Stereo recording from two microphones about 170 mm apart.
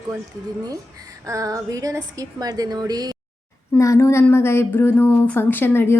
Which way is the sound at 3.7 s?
15° left (ahead or behind).